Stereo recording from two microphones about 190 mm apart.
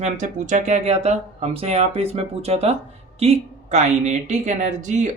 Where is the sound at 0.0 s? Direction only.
40° right (ahead or behind).